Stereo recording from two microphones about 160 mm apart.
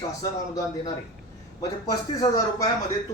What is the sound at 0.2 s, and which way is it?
A woman's voice, 20° left (ahead or behind).